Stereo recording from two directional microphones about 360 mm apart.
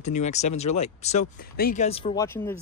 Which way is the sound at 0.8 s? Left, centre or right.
Centre.